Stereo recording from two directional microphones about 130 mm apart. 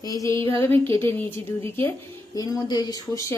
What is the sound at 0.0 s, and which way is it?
A woman's voice, 25° left (ahead or behind).